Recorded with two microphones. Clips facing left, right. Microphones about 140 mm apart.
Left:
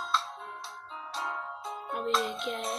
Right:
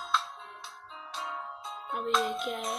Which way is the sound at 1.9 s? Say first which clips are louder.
Right 1 dB; centre (ahead or behind).